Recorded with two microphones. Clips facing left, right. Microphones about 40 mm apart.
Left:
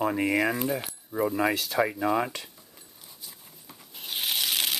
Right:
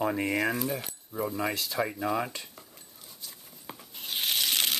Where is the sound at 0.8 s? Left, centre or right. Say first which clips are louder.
Left 5 dB; centre.